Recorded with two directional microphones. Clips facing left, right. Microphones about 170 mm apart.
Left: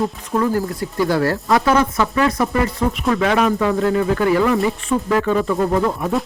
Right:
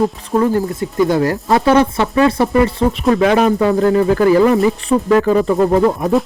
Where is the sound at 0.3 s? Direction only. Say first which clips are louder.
Right 4 dB; 25° right (ahead or behind).